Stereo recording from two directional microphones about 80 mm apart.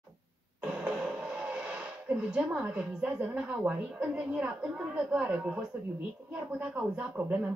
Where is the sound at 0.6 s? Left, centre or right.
Centre.